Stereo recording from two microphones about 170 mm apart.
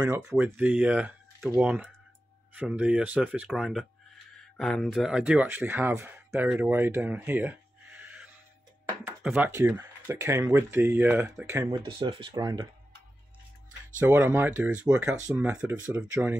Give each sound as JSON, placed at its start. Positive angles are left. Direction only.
{"t": 0.0, "sound": "speech", "side_deg": -15}
{"t": 11.8, "sound": "speech", "side_deg": -30}
{"t": 13.9, "sound": "speech", "side_deg": -15}